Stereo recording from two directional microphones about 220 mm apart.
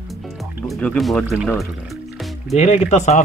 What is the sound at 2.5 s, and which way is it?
Speech, 30° left (ahead or behind).